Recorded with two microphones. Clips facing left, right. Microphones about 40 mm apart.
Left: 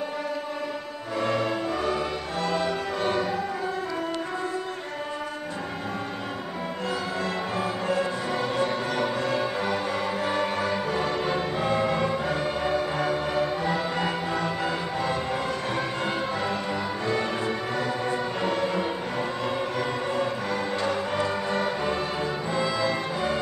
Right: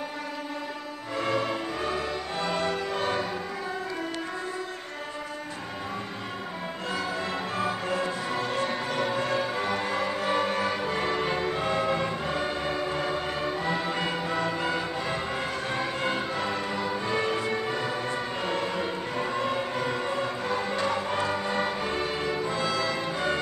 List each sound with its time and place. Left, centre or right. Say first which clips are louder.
1.1 s music: left 2 dB; centre
2.3 s music: left 2 dB; right
6.9 s music: even; centre
11.5 s music: left 2 dB; centre
14.6 s music: left 1 dB; centre
16.3 s music: left 1 dB; centre
17.1 s music: left 1 dB; centre
18.1 s music: left 3 dB; centre
20.4 s music: left 1 dB; centre